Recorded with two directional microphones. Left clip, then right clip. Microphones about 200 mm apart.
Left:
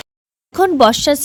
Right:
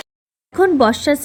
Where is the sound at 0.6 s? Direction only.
35° left (ahead or behind).